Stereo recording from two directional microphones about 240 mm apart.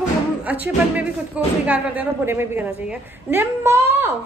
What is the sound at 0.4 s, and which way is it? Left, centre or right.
Speech, centre.